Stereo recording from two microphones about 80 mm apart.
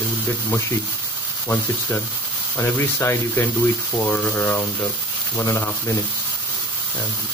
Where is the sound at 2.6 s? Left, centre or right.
Left.